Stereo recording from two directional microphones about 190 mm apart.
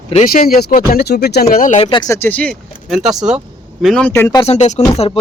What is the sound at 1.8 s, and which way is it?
Speech, 25° left (ahead or behind).